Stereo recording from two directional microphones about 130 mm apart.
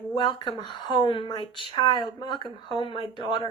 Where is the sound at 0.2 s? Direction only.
35° left (ahead or behind).